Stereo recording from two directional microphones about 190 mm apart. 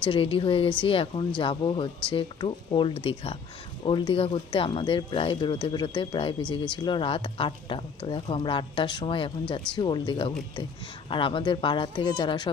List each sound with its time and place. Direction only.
0.0 s speech: 25° left (ahead or behind)